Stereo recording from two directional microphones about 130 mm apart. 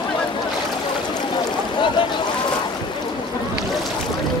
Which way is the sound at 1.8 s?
40° left (ahead or behind).